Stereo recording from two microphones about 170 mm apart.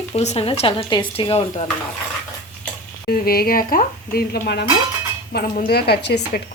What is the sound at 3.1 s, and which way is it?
A woman's voice, 65° left (ahead or behind).